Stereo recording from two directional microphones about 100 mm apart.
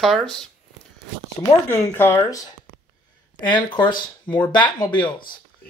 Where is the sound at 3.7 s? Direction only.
50° left (ahead or behind).